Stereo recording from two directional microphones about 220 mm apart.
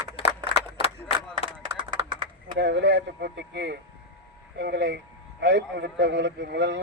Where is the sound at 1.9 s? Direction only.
20° right (ahead or behind).